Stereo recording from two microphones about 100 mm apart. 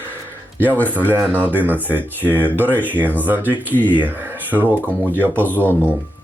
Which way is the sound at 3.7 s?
15° left (ahead or behind).